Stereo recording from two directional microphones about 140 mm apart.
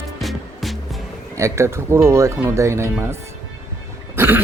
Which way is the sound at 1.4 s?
20° right (ahead or behind).